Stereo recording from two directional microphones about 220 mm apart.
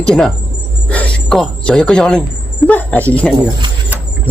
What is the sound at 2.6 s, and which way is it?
Speech, 5° left (ahead or behind).